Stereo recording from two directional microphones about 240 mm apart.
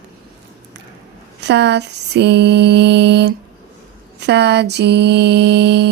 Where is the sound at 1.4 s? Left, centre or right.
Right.